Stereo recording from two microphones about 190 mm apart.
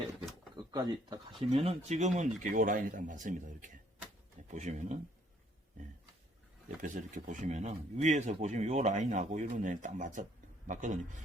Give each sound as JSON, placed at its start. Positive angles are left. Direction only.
{"t": 0.5, "sound": "speech", "side_deg": -20}
{"t": 1.5, "sound": "speech", "side_deg": -35}
{"t": 6.8, "sound": "speech", "side_deg": -40}